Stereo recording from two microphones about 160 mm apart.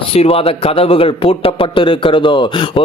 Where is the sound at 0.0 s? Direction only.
35° left (ahead or behind).